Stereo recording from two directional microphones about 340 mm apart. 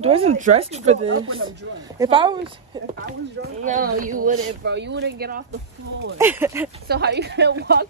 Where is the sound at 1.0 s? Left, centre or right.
Right.